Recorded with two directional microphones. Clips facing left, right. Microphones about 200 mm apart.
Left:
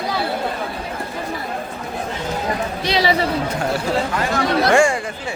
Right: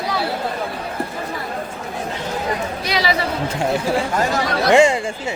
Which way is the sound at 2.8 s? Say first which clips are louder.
Left 3 dB; 35° left (ahead or behind).